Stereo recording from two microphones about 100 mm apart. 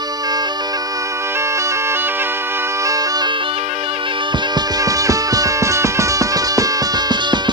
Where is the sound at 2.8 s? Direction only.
35° right (ahead or behind).